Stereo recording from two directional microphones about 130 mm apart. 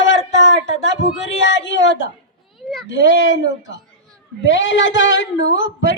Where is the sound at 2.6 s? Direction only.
Centre (ahead or behind).